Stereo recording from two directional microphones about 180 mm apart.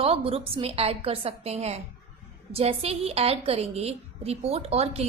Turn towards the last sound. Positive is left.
turn(degrees=-35)  # may be behind; listen again after turning